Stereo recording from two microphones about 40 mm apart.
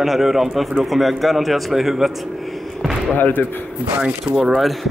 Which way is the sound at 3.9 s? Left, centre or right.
Right.